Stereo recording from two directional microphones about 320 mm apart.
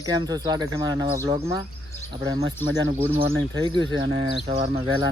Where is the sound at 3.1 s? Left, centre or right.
Centre.